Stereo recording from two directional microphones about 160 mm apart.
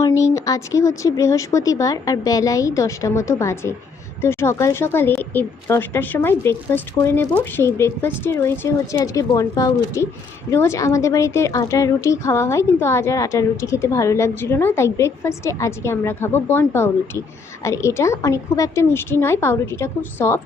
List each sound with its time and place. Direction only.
0.2 s a woman's voice: 20° left (ahead or behind)